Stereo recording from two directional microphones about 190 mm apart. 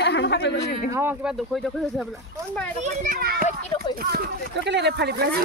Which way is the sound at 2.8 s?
40° right (ahead or behind).